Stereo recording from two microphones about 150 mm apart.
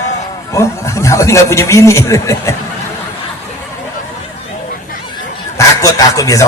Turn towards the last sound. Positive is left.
turn(degrees=20)  # may be behind; listen again after turning